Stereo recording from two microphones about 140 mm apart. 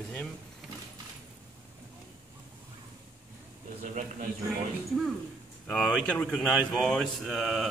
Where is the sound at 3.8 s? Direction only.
60° right (ahead or behind).